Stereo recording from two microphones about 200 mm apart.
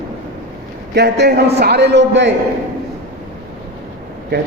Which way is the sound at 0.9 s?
55° right (ahead or behind).